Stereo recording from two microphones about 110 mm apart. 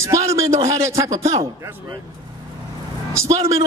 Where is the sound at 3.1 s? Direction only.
25° right (ahead or behind).